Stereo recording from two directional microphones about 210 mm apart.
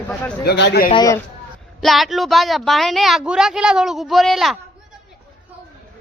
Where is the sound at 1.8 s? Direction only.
Centre (ahead or behind).